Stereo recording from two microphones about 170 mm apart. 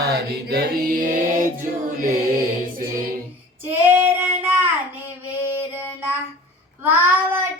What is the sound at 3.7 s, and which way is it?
Female singing, 10° right (ahead or behind).